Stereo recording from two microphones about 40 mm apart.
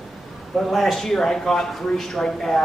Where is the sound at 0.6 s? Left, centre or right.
Centre.